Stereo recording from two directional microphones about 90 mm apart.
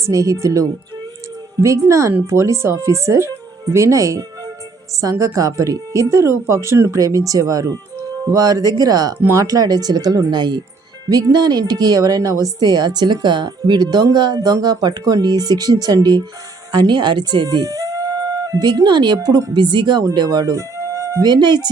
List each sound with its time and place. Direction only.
0.0 s speech: 35° right (ahead or behind)
1.9 s a woman's voice: 35° right (ahead or behind)
21.2 s a woman's voice: 50° right (ahead or behind)